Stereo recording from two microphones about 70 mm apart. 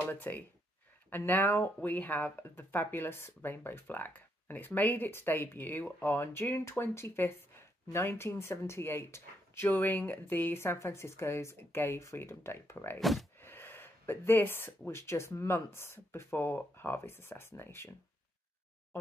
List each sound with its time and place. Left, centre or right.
0.1 s speech: left
13.0 s speech: centre
13.4 s speech: left